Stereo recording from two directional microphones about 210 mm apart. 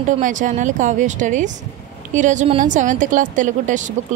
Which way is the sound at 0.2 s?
35° right (ahead or behind).